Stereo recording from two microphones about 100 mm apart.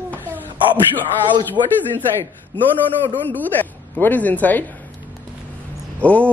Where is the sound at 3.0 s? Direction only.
20° left (ahead or behind).